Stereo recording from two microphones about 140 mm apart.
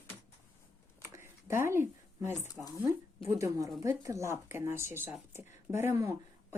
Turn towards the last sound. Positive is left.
turn(degrees=-20)  # may be behind; listen again after turning